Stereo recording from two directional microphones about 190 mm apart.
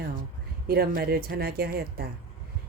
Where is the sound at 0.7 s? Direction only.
55° right (ahead or behind).